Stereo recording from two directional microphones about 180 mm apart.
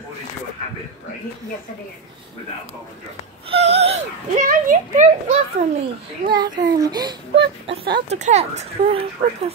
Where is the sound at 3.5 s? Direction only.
35° right (ahead or behind).